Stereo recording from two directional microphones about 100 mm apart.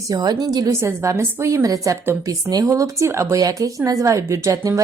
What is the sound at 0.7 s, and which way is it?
A woman's voice, 30° right (ahead or behind).